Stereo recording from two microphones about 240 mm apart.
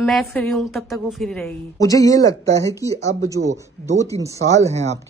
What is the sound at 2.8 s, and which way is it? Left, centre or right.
Speech, right.